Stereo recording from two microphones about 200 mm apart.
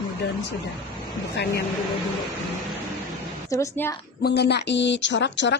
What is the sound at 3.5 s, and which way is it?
Speech, 15° left (ahead or behind).